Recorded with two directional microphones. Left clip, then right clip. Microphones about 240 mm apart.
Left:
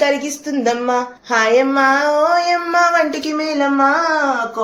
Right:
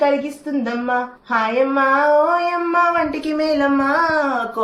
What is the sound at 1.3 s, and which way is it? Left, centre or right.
A woman's voice, left.